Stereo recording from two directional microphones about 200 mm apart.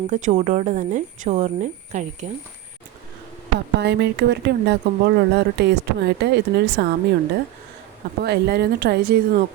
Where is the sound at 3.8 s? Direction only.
60° right (ahead or behind).